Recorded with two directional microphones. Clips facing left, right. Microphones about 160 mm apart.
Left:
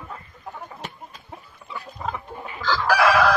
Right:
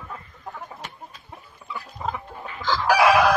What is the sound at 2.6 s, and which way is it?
Chicken, 15° right (ahead or behind).